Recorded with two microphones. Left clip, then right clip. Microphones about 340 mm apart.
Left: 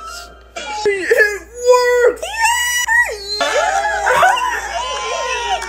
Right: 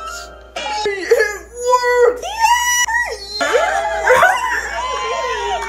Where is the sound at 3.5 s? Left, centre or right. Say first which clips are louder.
Even; left.